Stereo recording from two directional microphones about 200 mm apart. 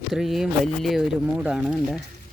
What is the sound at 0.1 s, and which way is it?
Speech, centre (ahead or behind).